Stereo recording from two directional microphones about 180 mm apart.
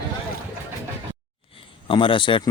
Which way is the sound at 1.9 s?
30° left (ahead or behind).